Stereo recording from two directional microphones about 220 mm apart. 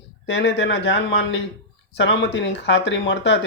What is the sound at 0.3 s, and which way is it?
Speech, 55° left (ahead or behind).